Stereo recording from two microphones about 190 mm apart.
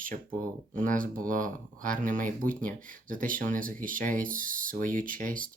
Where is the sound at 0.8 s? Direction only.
45° right (ahead or behind).